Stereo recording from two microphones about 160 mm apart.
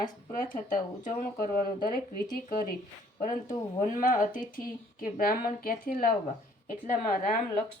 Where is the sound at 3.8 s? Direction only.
55° left (ahead or behind).